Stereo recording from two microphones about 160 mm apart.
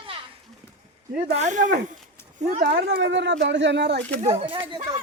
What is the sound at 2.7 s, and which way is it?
Speech, 90° right.